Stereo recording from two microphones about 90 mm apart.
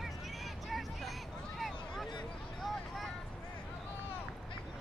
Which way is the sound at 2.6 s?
Centre (ahead or behind).